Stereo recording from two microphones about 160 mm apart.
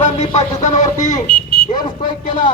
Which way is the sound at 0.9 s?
20° left (ahead or behind).